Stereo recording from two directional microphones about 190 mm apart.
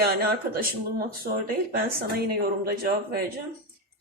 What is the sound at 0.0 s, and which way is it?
Speech, 55° right (ahead or behind).